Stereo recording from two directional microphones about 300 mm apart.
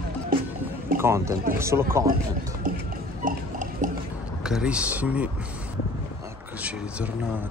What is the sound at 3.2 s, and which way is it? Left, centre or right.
Liquid, right.